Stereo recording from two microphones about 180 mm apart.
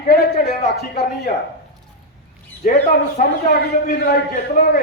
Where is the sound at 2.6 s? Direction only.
55° left (ahead or behind).